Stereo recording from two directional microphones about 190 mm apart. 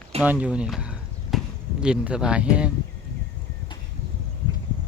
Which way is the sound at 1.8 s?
5° right (ahead or behind).